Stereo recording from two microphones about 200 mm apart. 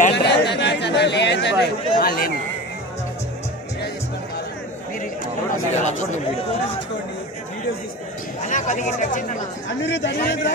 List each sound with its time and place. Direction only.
0.1 s chatter: 60° left (ahead or behind)
5.8 s speech: 35° left (ahead or behind)
8.4 s speech: 40° left (ahead or behind)
9.8 s a man's voice: 60° left (ahead or behind)